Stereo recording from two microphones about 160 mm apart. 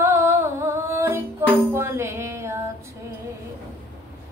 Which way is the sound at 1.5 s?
15° right (ahead or behind).